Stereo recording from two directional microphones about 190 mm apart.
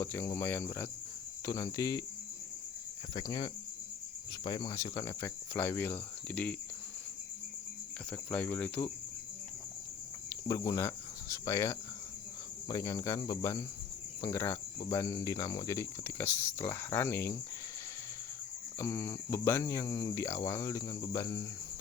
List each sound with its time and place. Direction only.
0.0 s speech: 15° left (ahead or behind)
3.2 s speech: 20° left (ahead or behind)
8.1 s speech: 10° left (ahead or behind)
10.2 s speech: 15° left (ahead or behind)
18.8 s speech: 15° left (ahead or behind)